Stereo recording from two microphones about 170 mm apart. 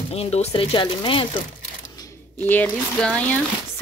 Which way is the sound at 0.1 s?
40° left (ahead or behind).